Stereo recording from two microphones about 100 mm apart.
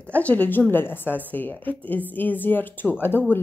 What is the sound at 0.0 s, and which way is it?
Speech, 15° left (ahead or behind).